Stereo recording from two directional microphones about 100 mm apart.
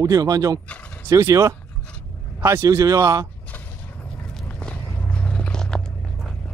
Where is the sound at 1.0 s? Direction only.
35° right (ahead or behind).